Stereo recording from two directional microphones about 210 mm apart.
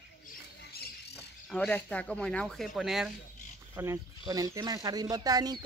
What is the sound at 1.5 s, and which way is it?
Speech, 5° left (ahead or behind).